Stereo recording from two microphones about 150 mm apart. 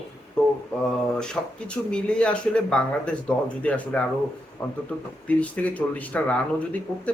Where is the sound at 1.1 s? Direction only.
5° left (ahead or behind).